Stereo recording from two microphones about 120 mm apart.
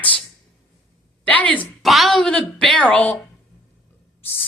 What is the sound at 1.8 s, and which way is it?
A woman's voice, centre (ahead or behind).